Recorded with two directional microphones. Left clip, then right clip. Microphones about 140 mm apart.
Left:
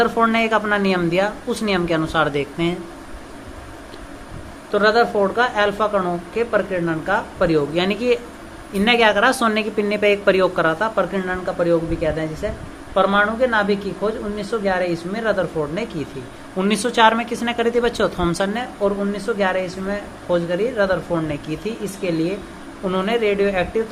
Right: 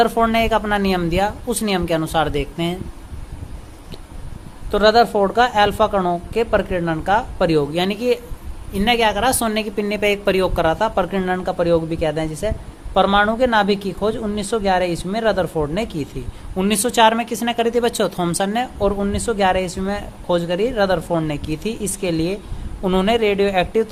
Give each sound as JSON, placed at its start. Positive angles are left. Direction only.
{"t": 0.0, "sound": "a woman's voice", "side_deg": -45}
{"t": 4.7, "sound": "a woman's voice", "side_deg": -60}
{"t": 16.6, "sound": "a woman's voice", "side_deg": -45}